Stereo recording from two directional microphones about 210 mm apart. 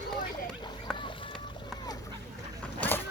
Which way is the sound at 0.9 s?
25° left (ahead or behind).